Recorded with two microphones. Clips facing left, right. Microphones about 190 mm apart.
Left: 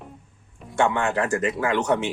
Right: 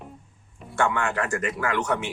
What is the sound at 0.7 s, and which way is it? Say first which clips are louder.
Speech: left 3 dB; 20° left (ahead or behind).